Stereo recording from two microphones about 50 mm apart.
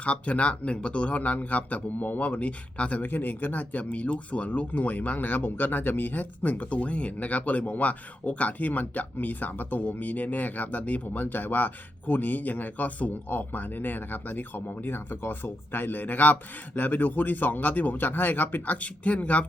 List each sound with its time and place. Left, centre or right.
0.0 s speech: left
3.0 s speech: left